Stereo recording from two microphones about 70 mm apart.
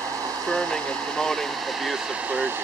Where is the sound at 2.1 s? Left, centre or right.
Centre.